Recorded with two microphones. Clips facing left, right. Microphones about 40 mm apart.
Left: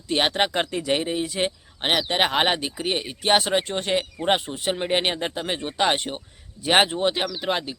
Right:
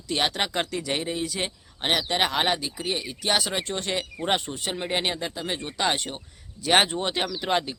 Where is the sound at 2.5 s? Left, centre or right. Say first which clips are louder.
Left 3 dB; left.